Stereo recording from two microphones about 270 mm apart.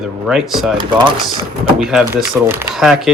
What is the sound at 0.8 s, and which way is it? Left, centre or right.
Speech, centre.